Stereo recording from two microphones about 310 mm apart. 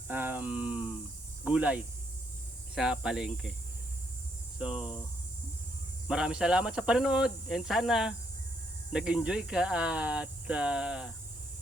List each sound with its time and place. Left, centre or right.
0.1 s speech: centre
6.1 s speech: centre